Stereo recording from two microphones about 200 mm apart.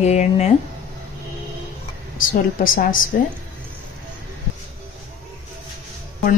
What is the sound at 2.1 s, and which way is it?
Speech, 45° left (ahead or behind).